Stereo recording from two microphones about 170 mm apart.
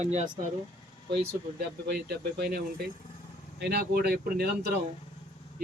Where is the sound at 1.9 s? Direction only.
65° right (ahead or behind).